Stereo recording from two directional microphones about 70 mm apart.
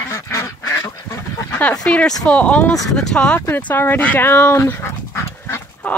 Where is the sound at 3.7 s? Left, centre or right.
Left.